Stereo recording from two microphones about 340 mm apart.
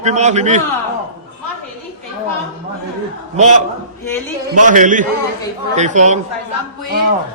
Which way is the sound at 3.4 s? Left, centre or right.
Centre.